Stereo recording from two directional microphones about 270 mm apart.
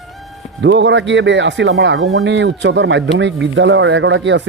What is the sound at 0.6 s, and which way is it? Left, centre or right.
Speech, right.